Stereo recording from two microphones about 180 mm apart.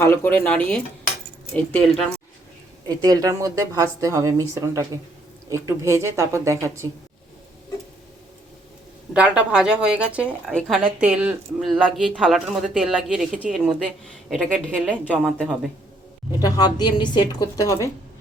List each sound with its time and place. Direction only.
0.0 s speech: 15° left (ahead or behind)
2.8 s a woman's voice: 20° right (ahead or behind)
9.1 s speech: 5° right (ahead or behind)
16.4 s a woman's voice: 20° left (ahead or behind)